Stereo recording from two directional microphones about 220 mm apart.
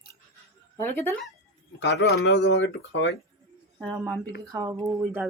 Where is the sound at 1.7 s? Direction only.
50° left (ahead or behind).